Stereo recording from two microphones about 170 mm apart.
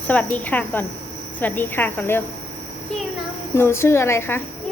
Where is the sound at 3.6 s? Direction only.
15° left (ahead or behind).